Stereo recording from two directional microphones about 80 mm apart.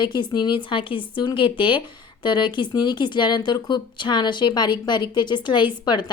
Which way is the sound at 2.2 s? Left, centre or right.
Left.